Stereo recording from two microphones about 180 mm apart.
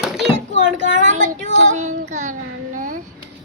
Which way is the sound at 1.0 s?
45° right (ahead or behind).